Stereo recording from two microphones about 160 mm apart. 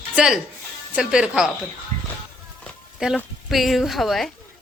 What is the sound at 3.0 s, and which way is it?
A woman's voice, 5° right (ahead or behind).